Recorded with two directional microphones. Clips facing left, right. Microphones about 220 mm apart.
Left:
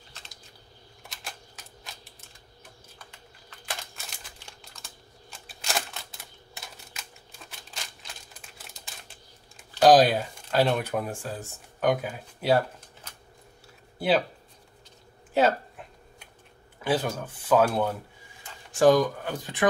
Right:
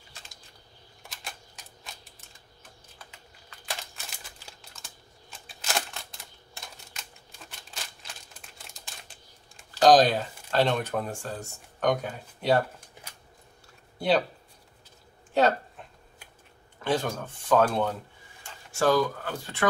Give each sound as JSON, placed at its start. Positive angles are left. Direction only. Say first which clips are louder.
{"t": 1.0, "sound": "camera", "louder": "even", "side_deg": 0}
{"t": 3.1, "sound": "computer keyboard", "louder": "left 1 dB", "side_deg": 0}
{"t": 4.5, "sound": "crumpling", "louder": "left 1 dB", "side_deg": 0}
{"t": 6.5, "sound": "a sound", "louder": "left 1 dB", "side_deg": 0}
{"t": 9.8, "sound": "speech", "louder": "left 1 dB", "side_deg": 10}
{"t": 13.9, "sound": "speech", "louder": "even", "side_deg": 5}
{"t": 16.8, "sound": "speech", "louder": "left 1 dB", "side_deg": 5}
{"t": 18.7, "sound": "speech", "louder": "left 4 dB", "side_deg": 20}